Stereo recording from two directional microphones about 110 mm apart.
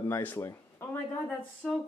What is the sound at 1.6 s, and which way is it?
Speech, 5° left (ahead or behind).